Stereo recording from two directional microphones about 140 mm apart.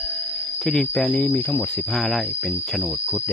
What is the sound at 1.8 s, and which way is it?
Speech, centre (ahead or behind).